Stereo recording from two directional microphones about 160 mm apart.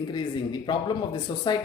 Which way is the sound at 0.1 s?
30° left (ahead or behind).